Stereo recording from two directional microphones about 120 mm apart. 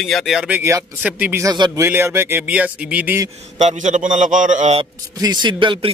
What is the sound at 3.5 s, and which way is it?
A man's voice, 85° right.